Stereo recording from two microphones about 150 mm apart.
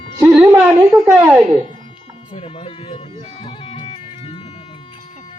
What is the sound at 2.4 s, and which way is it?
Speech, 40° left (ahead or behind).